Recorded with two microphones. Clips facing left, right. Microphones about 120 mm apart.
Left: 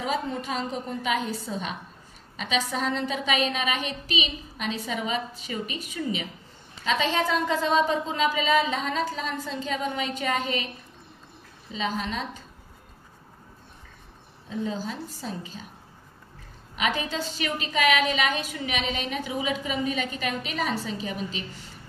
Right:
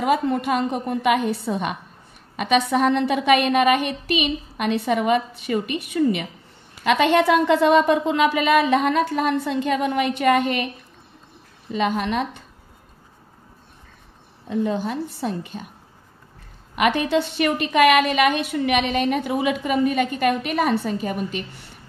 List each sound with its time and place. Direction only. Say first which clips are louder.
0.0 s a woman's voice: right 8 dB; 60° right (ahead or behind)
11.7 s a woman's voice: right 8 dB; 60° right (ahead or behind)
14.5 s a woman's voice: right 7 dB; 60° right (ahead or behind)
16.7 s a woman's voice: right 9 dB; 60° right (ahead or behind)